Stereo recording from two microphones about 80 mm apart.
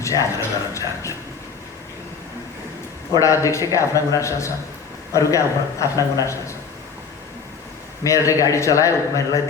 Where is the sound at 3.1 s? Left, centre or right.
Left.